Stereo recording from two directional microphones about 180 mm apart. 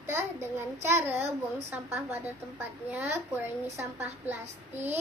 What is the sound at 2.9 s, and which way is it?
A child's voice, 10° right (ahead or behind).